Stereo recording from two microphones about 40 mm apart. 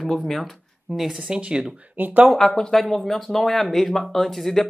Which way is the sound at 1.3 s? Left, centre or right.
Right.